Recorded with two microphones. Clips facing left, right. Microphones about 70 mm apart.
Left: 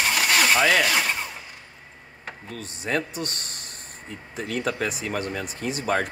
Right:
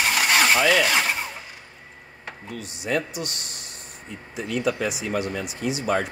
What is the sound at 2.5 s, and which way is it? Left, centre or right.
Speech, left.